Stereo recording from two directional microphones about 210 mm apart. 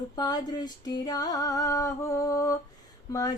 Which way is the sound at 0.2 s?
20° left (ahead or behind).